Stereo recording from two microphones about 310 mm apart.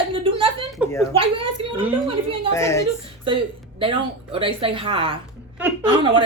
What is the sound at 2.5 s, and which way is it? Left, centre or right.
Speech, centre.